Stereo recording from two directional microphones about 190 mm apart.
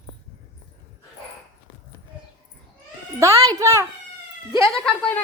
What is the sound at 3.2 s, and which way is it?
Speech, 15° right (ahead or behind).